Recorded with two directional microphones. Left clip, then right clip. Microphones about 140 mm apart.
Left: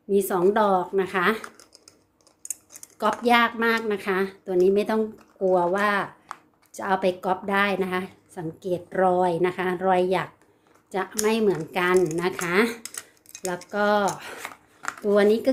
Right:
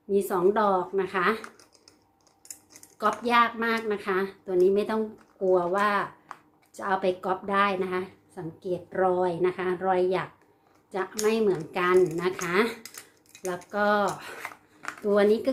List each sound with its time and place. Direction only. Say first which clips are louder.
0.1 s speech: left 3 dB; 55° left (ahead or behind)
3.0 s speech: left 3 dB; 50° left (ahead or behind)
11.3 s speech: left 1 dB; 55° left (ahead or behind)
12.8 s a sound: left 5 dB; 35° left (ahead or behind)
13.7 s speech: left 2 dB; 50° left (ahead or behind)
14.4 s a sound: left 4 dB; 20° left (ahead or behind)
15.0 s speech: left 2 dB; 50° left (ahead or behind)